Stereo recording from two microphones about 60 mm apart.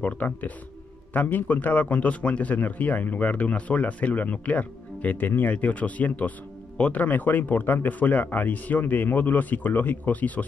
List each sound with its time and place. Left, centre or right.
0.0 s a man's voice: left